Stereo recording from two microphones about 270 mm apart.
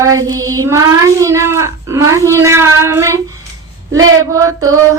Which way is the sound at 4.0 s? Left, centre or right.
Right.